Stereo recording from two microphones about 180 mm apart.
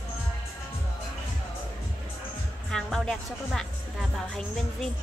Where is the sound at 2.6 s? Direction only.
5° left (ahead or behind).